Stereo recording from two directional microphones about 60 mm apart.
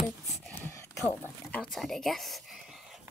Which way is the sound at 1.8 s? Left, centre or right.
Centre.